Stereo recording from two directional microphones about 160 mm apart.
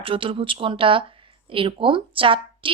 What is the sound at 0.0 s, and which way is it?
A woman's voice, 35° right (ahead or behind).